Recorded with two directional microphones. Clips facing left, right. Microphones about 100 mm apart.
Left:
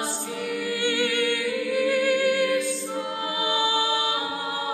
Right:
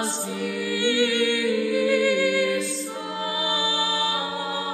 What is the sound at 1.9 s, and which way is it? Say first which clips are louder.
Music: right 1 dB; 45° left (ahead or behind).